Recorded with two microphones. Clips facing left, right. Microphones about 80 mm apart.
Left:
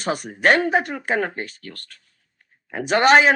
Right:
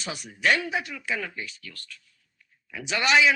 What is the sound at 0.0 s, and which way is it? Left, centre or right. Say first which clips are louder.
Speech: left 7 dB; left.